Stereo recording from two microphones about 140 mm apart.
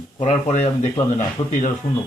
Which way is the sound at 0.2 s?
50° left (ahead or behind).